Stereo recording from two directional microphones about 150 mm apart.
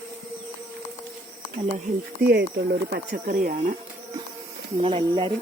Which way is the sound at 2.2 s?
90° right.